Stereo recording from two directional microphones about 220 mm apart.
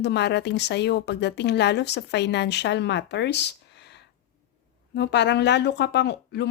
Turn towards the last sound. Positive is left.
turn(degrees=50)  # may be behind; listen again after turning